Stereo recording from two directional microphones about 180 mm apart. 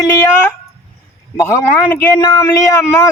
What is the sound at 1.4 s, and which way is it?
Speech, 15° left (ahead or behind).